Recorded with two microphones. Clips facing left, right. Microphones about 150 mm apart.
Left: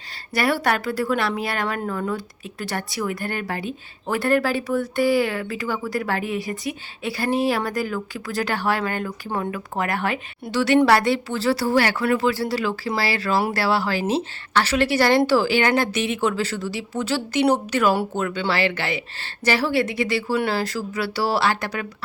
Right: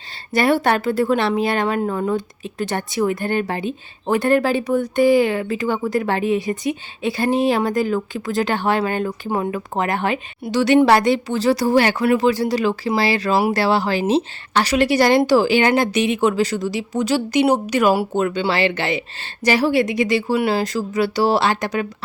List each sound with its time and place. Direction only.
0.3 s a woman's voice: 25° right (ahead or behind)
9.4 s speech: 35° right (ahead or behind)
9.7 s a woman's voice: 20° right (ahead or behind)